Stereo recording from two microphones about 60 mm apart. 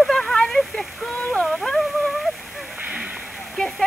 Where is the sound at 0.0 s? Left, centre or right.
Centre.